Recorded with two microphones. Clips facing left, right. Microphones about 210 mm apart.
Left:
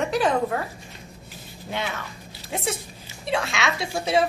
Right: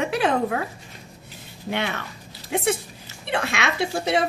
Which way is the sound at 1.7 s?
65° right (ahead or behind).